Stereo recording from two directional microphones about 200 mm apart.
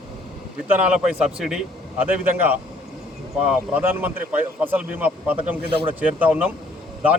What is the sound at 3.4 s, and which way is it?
A man's voice, 10° right (ahead or behind).